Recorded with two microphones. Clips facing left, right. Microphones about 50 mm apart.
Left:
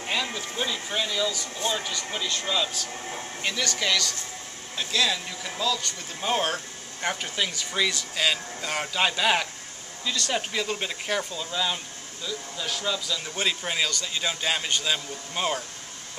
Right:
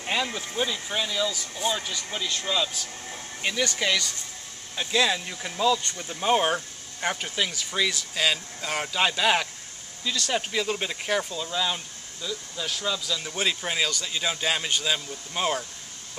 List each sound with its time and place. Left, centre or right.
0.0 s a sound: centre
0.7 s speech: centre
2.9 s speech: left
3.4 s speech: centre